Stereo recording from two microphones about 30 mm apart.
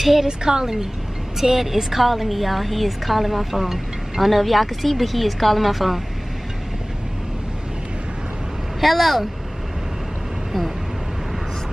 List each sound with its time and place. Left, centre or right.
0.0 s a woman's voice: centre
0.3 s a woman's voice: right
1.4 s a woman's voice: centre
8.8 s a woman's voice: centre